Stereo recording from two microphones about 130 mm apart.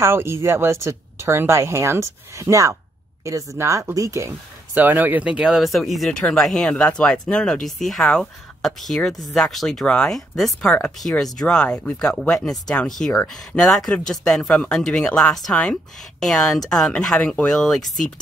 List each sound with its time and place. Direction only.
0.0 s a woman's voice: 20° right (ahead or behind); by 18.0 s centre (ahead or behind)